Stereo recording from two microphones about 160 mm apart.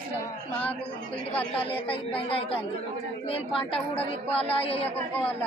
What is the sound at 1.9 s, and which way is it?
A woman's voice, 35° left (ahead or behind).